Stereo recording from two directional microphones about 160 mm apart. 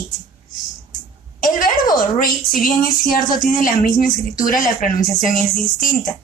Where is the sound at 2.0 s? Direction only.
60° left (ahead or behind).